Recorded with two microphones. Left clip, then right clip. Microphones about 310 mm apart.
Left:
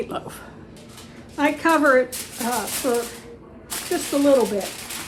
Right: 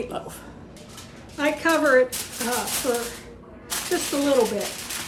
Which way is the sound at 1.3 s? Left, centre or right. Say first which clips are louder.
Left 3 dB; centre.